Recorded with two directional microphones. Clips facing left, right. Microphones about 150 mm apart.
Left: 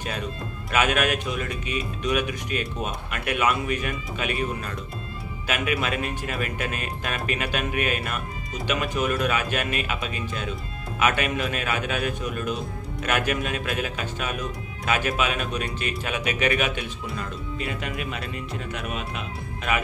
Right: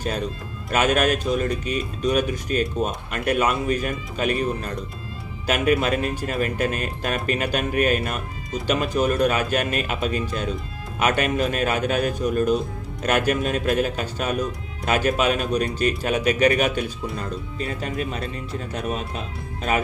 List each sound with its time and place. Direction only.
0.7 s speech: 40° right (ahead or behind)